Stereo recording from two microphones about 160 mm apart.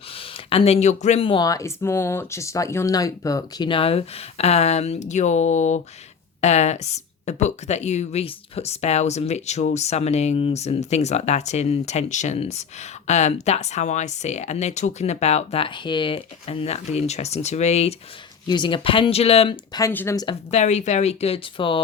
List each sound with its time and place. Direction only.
0.1 s speech: 35° left (ahead or behind)
18.4 s speech: 30° left (ahead or behind)
19.9 s speech: 10° left (ahead or behind)
20.5 s speech: 45° left (ahead or behind)